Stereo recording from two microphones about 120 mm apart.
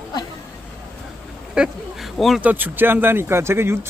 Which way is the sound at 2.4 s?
15° right (ahead or behind).